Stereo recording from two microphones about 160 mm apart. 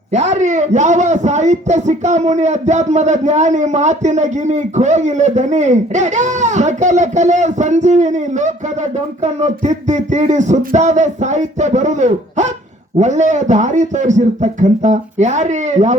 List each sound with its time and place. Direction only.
0.1 s a man's voice: 45° right (ahead or behind)